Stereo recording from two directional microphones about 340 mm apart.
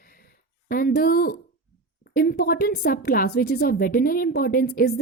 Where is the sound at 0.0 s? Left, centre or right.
Left.